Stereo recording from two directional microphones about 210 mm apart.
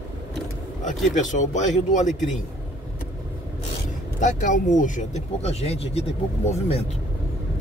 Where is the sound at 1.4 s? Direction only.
35° left (ahead or behind).